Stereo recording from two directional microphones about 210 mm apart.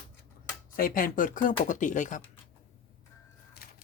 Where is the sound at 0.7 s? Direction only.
40° left (ahead or behind).